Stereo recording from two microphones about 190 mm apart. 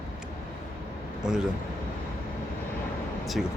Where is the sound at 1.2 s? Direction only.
5° right (ahead or behind).